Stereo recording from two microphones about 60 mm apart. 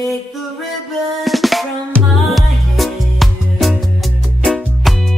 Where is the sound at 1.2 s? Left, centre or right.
Centre.